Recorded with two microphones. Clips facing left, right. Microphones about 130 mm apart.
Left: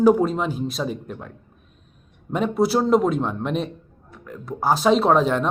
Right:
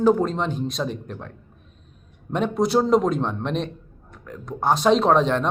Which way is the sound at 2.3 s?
Centre (ahead or behind).